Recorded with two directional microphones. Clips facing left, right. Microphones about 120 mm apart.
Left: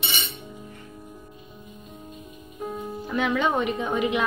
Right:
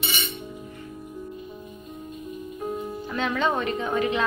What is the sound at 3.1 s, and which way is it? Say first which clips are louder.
A woman's voice: left 2 dB; 10° left (ahead or behind).